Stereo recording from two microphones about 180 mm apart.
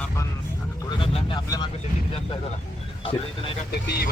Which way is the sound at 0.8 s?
25° left (ahead or behind).